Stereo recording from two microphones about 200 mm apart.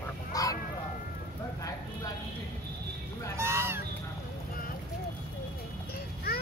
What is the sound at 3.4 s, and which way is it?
Speech, 15° right (ahead or behind).